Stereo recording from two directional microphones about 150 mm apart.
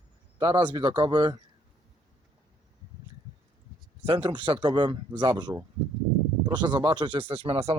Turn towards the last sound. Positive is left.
turn(degrees=-40)  # may be behind; listen again after turning